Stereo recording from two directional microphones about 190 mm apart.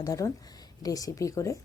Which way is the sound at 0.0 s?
20° left (ahead or behind).